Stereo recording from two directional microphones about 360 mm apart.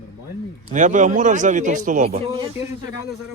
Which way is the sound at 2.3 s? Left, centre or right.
Centre.